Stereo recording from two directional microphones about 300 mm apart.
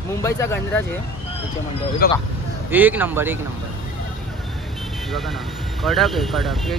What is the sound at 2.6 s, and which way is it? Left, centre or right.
Speech, centre.